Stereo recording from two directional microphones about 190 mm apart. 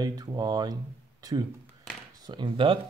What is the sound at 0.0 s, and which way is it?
Speech, 20° right (ahead or behind).